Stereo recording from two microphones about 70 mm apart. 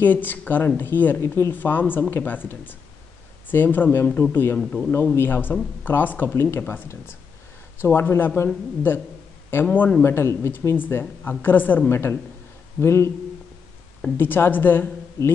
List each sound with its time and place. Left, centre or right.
0.0 s speech: left
1.2 s a woman's voice: left
1.5 s speech: left
4.6 s speech: centre
4.9 s speech: left
7.8 s a woman's voice: left
9.5 s a woman's voice: left
14.1 s speech: left